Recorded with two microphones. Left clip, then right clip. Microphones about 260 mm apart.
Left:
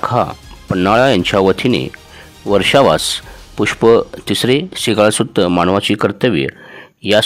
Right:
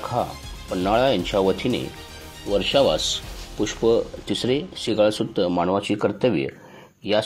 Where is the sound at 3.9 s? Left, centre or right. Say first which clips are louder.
Left 9 dB; left.